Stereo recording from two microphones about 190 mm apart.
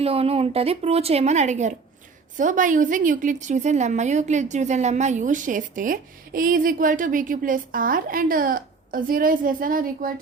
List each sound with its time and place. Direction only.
0.0 s a woman's voice: 30° right (ahead or behind); by 10.1 s 45° right (ahead or behind)